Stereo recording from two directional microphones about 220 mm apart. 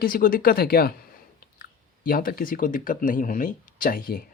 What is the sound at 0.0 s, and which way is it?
Speech, 40° left (ahead or behind).